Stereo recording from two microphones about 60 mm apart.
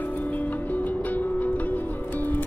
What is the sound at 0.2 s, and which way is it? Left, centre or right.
Music, left.